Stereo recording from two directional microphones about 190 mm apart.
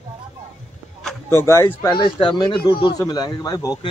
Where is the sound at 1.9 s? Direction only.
25° left (ahead or behind).